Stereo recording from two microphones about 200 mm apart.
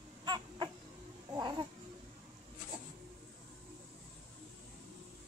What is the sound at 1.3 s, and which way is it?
Cat, 20° right (ahead or behind).